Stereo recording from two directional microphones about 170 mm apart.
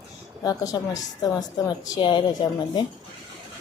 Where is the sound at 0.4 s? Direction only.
20° left (ahead or behind).